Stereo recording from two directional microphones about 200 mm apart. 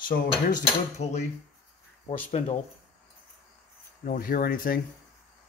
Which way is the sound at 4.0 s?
45° left (ahead or behind).